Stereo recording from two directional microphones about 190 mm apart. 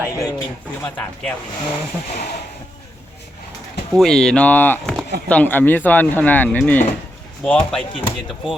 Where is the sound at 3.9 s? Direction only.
Centre (ahead or behind).